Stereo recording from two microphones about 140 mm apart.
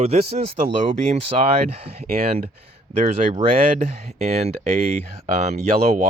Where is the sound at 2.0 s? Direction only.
90° right.